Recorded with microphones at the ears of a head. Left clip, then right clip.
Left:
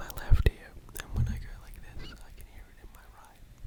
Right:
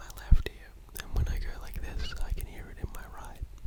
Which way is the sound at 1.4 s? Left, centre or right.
Right.